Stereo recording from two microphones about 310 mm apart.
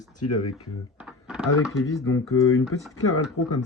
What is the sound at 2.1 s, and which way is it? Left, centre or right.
Speech, left.